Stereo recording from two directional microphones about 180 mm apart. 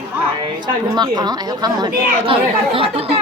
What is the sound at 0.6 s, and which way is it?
Speech, 25° right (ahead or behind).